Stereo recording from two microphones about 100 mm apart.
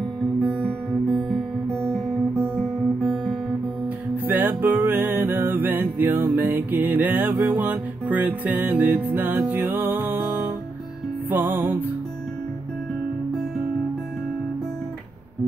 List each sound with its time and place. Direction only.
0.2 s music: 5° left (ahead or behind)
1.3 s guitar: centre (ahead or behind)
4.3 s music: 20° right (ahead or behind)